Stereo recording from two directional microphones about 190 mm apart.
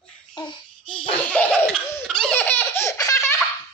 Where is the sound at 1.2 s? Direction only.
5° left (ahead or behind).